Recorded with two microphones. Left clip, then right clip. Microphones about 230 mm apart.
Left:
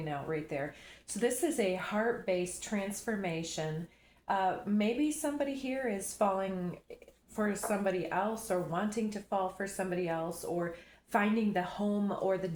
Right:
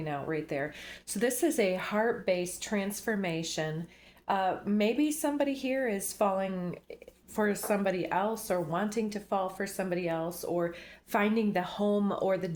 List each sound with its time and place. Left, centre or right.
0.0 s a woman's voice: right